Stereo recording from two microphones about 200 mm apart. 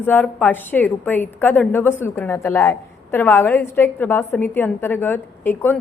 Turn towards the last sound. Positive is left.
turn(degrees=10)  # may be behind; listen again after turning